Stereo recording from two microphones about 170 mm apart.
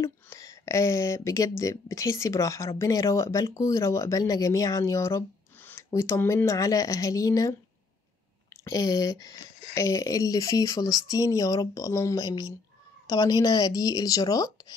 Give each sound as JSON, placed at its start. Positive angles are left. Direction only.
{"t": 0.0, "sound": "speech", "side_deg": 15}
{"t": 8.6, "sound": "speech", "side_deg": 20}